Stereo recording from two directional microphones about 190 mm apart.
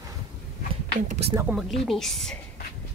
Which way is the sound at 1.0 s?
35° right (ahead or behind).